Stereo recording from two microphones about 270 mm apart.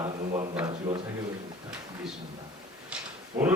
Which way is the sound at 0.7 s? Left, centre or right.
Centre.